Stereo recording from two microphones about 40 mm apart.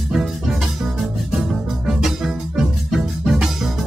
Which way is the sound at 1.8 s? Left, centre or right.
Centre.